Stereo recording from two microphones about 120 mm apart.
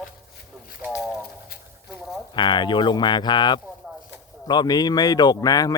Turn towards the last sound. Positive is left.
turn(degrees=30)  # may be behind; listen again after turning